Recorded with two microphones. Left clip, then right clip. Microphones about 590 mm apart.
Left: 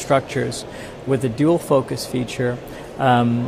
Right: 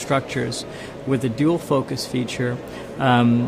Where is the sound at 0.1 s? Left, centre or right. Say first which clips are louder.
Left 4 dB; left.